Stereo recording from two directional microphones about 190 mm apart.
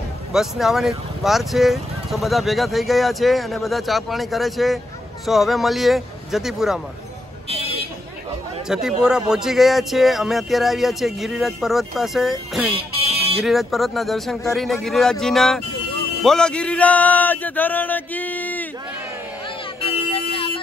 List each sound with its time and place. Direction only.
0.3 s speech: centre (ahead or behind)
7.4 s vehicle: 30° right (ahead or behind)
8.6 s speech: 5° right (ahead or behind)
12.7 s music: 30° right (ahead or behind)
13.5 s speech: centre (ahead or behind)
19.8 s vehicle: 30° left (ahead or behind)